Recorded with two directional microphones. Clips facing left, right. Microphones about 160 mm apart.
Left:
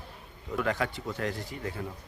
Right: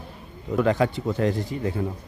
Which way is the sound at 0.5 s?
25° right (ahead or behind).